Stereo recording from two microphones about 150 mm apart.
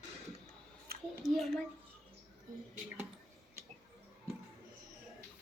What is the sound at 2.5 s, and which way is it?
Speech, 65° right (ahead or behind).